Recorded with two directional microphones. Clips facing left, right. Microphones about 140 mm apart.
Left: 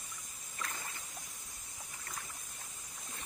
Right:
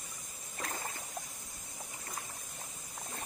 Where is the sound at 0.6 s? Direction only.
35° right (ahead or behind).